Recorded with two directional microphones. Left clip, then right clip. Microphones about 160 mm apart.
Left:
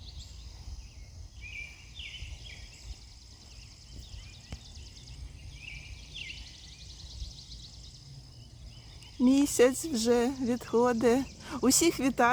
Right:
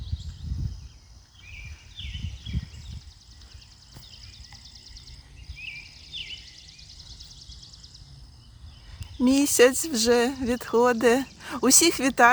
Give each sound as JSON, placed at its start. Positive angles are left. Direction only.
{"t": 9.2, "sound": "speech", "side_deg": -15}